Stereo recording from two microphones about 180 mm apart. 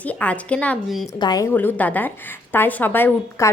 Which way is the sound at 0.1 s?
5° left (ahead or behind).